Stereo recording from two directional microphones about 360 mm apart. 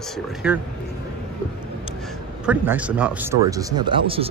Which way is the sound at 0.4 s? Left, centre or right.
Centre.